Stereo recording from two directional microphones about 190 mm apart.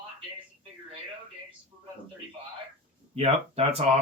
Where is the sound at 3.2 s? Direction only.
30° right (ahead or behind).